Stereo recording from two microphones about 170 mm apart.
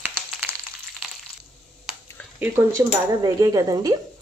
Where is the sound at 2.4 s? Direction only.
15° right (ahead or behind).